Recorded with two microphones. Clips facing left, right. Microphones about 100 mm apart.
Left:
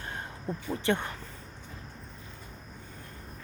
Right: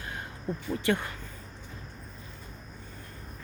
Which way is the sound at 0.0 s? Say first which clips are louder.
Even; 30° left (ahead or behind).